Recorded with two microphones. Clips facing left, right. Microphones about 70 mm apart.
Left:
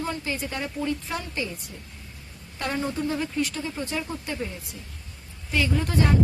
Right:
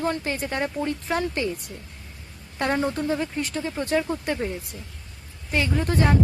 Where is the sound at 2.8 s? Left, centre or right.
Right.